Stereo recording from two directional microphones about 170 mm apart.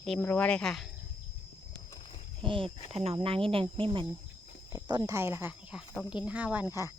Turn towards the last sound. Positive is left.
turn(degrees=-15)  # may be behind; listen again after turning